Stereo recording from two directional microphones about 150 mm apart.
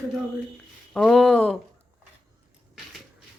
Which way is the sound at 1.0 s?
Centre (ahead or behind).